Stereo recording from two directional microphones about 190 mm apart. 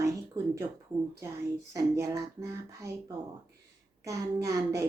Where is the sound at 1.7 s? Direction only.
15° right (ahead or behind).